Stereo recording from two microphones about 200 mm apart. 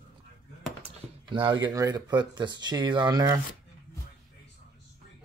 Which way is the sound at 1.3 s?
25° right (ahead or behind).